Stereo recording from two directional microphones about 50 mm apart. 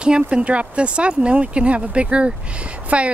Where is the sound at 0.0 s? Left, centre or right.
Centre.